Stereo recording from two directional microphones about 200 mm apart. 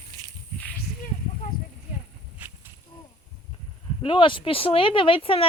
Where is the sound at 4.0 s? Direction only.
25° left (ahead or behind).